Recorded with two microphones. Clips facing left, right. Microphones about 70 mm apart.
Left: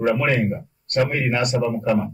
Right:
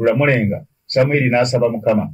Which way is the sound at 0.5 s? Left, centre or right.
Right.